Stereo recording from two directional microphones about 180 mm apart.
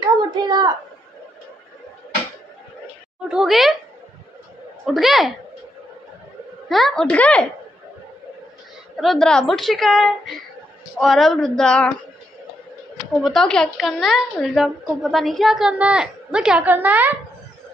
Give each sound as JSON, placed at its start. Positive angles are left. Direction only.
{"t": 0.3, "sound": "a child's voice", "side_deg": -25}
{"t": 3.3, "sound": "a woman's voice", "side_deg": 0}
{"t": 4.8, "sound": "a woman's voice", "side_deg": 0}
{"t": 6.7, "sound": "a woman's voice", "side_deg": 0}
{"t": 8.9, "sound": "a woman's voice", "side_deg": 0}
{"t": 13.2, "sound": "a woman's voice", "side_deg": 0}